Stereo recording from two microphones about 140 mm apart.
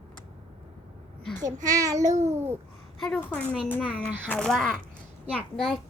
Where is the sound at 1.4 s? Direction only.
65° right (ahead or behind).